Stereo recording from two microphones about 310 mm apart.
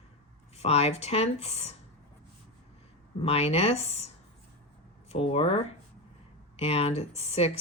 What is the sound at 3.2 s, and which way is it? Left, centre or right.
Speech, centre.